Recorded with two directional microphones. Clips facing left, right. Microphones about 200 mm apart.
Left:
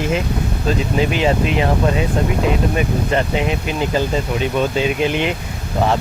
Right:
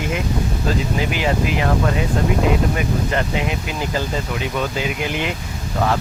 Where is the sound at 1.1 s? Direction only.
25° left (ahead or behind).